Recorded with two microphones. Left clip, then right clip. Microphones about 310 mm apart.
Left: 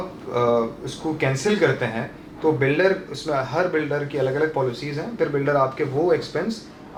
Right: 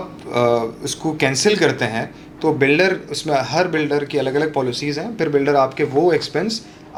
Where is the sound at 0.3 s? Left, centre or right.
Right.